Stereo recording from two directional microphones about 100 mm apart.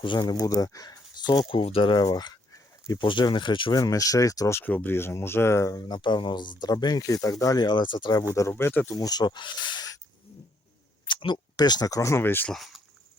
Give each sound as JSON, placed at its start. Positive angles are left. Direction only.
{"t": 0.0, "sound": "speech", "side_deg": 50}
{"t": 3.0, "sound": "speech", "side_deg": 55}
{"t": 3.8, "sound": "speech", "side_deg": 35}
{"t": 4.6, "sound": "speech", "side_deg": 20}
{"t": 5.9, "sound": "speech", "side_deg": 50}
{"t": 8.4, "sound": "speech", "side_deg": 25}
{"t": 9.0, "sound": "speech", "side_deg": 40}
{"t": 11.0, "sound": "speech", "side_deg": 50}
{"t": 12.5, "sound": "speech", "side_deg": 0}